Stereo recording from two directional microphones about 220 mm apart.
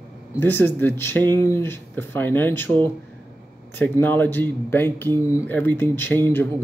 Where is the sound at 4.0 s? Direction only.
10° left (ahead or behind).